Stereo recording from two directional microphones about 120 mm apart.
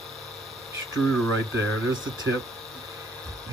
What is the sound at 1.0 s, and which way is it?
Speech, centre (ahead or behind).